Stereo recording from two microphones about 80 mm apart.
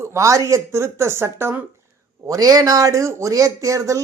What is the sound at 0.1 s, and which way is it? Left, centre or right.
Speech, right.